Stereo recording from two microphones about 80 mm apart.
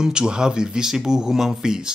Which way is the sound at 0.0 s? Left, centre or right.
Centre.